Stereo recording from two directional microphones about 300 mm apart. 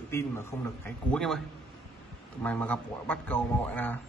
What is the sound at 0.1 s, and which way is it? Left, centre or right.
A man's voice, centre.